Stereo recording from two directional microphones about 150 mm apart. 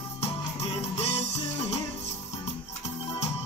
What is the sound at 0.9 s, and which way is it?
Music, 45° left (ahead or behind).